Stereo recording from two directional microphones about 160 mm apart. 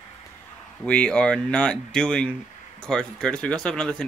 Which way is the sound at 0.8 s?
5° left (ahead or behind).